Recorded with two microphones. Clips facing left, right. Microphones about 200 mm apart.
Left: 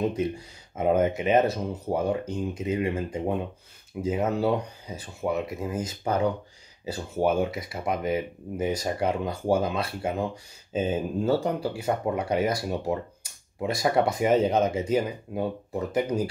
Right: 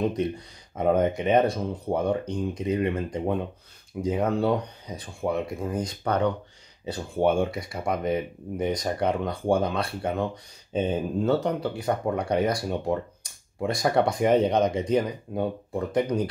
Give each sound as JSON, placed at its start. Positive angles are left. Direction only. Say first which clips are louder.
{"t": 0.7, "sound": "speech", "louder": "even", "side_deg": 5}